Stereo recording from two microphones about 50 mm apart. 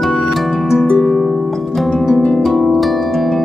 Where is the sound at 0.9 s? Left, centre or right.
Centre.